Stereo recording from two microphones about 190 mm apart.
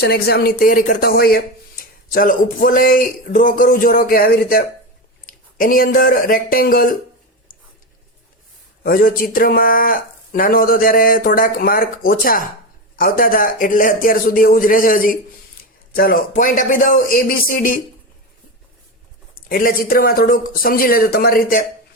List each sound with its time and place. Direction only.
0.0 s speech: 55° left (ahead or behind)
8.8 s speech: 50° left (ahead or behind)
19.5 s speech: 50° left (ahead or behind)